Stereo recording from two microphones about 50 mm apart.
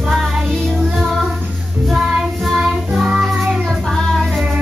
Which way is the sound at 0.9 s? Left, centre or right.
Centre.